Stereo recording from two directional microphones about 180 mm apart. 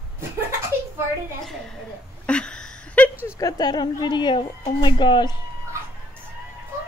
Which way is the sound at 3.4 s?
20° left (ahead or behind).